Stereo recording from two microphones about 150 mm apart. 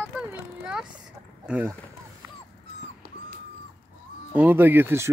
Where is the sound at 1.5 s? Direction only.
10° right (ahead or behind).